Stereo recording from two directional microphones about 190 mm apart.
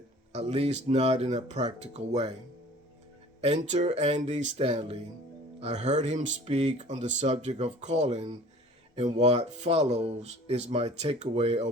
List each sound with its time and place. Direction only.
0.3 s speech: 30° right (ahead or behind)
3.4 s speech: 35° right (ahead or behind)